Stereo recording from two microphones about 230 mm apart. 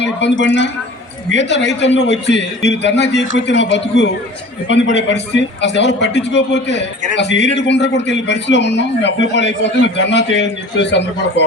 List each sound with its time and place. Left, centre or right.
0.0 s a man's voice: left